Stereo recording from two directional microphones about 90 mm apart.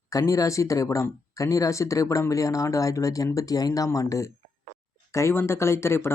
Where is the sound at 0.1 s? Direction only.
35° left (ahead or behind).